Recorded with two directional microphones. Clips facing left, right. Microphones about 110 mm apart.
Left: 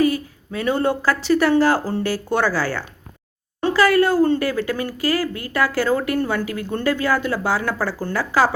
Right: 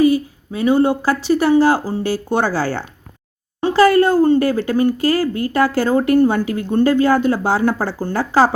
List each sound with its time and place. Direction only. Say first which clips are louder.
0.0 s speech: right 5 dB; 20° right (ahead or behind)